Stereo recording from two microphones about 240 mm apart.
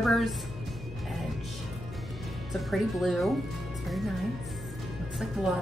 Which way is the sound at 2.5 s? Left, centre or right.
Centre.